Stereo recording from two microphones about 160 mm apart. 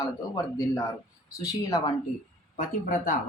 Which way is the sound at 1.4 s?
25° left (ahead or behind).